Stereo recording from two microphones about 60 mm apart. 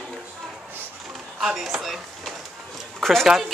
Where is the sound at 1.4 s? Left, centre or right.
Centre.